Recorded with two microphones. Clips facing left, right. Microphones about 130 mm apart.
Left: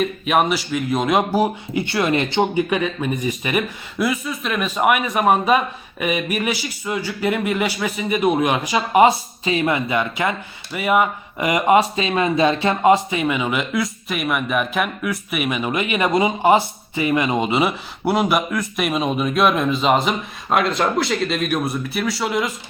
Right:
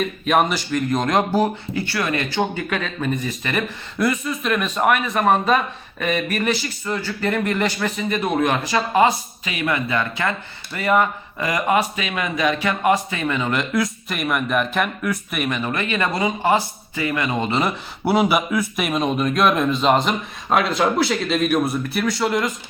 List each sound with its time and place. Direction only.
0.0 s speech: 5° left (ahead or behind)
9.4 s speech: 30° left (ahead or behind); by 17.7 s 10° left (ahead or behind)
18.0 s speech: centre (ahead or behind)